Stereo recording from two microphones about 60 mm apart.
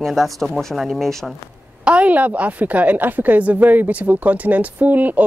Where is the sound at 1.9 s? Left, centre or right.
Right.